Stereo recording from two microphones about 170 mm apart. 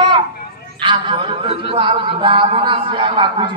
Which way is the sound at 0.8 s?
30° right (ahead or behind).